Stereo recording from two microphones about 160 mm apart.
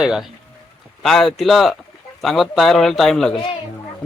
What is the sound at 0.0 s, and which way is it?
A man's voice, 5° right (ahead or behind).